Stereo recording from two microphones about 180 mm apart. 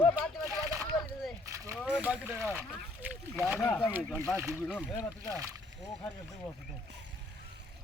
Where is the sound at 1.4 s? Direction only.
15° right (ahead or behind).